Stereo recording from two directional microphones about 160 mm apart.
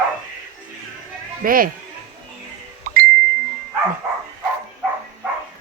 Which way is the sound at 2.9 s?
65° right (ahead or behind).